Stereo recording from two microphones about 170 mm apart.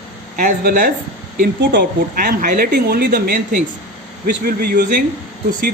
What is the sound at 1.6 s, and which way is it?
A woman's voice, 70° right (ahead or behind).